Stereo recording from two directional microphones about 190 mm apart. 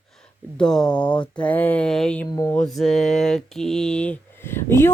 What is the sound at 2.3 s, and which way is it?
Speech, 15° left (ahead or behind).